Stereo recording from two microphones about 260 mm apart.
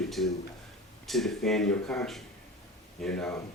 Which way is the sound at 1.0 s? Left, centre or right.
Centre.